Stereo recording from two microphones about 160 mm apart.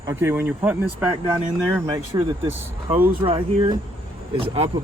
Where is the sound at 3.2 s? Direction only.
35° right (ahead or behind).